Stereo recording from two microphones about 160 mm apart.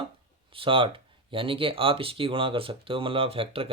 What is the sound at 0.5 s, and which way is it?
Speech, 35° right (ahead or behind).